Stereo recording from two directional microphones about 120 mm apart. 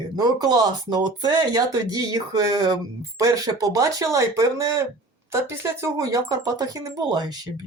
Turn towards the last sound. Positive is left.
turn(degrees=-35)  # may be behind; listen again after turning